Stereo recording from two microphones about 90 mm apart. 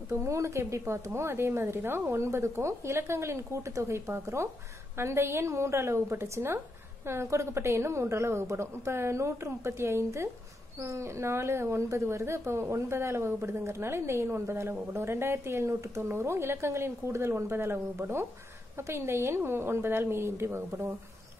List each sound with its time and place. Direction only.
0.1 s speech: 30° right (ahead or behind)